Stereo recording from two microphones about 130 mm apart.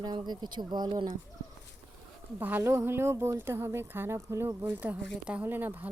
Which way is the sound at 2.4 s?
15° right (ahead or behind).